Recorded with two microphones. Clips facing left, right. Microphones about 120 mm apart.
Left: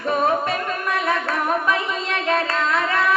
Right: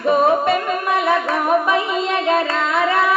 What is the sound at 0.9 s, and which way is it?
Music, 10° right (ahead or behind).